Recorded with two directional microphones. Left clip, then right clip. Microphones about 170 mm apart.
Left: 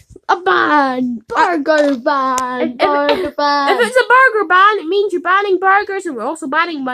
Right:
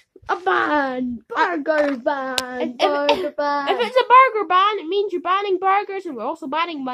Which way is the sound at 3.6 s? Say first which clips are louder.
Left 3 dB; 5° left (ahead or behind).